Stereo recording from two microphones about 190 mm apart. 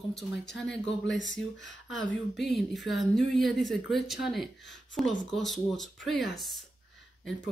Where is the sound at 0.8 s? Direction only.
70° left (ahead or behind).